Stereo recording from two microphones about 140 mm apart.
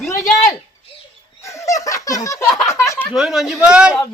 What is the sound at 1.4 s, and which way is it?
Giggle, 20° left (ahead or behind).